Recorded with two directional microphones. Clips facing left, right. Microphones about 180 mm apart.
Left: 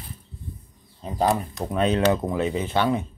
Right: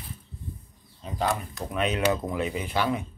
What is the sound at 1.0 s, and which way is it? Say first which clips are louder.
Speech: left 5 dB; 40° left (ahead or behind).